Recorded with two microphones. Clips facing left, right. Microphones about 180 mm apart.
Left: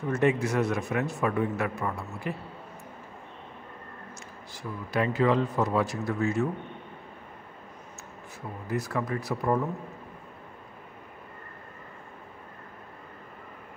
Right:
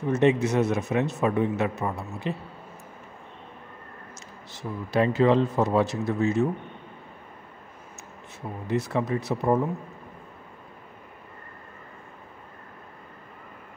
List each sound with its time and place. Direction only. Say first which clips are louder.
0.1 s a man's voice: right 4 dB; 20° right (ahead or behind)
4.6 s a man's voice: right 4 dB; 25° right (ahead or behind)
8.6 s a man's voice: right 4 dB; 25° right (ahead or behind)